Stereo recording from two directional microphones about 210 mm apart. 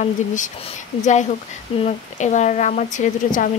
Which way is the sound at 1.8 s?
35° left (ahead or behind).